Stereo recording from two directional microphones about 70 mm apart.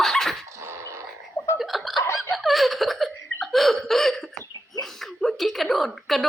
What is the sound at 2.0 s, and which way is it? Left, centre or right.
Laughter, left.